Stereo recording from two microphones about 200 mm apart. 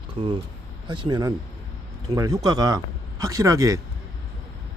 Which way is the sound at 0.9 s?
20° right (ahead or behind).